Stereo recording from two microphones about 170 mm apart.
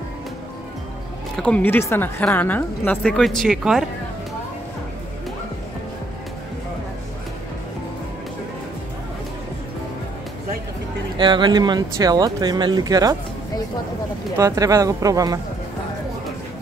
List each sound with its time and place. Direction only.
1.3 s a woman's voice: 5° left (ahead or behind)
11.1 s speech: 25° right (ahead or behind)
14.3 s speech: 20° right (ahead or behind)